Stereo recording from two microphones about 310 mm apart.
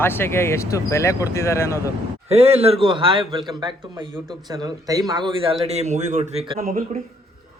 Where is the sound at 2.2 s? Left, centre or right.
Centre.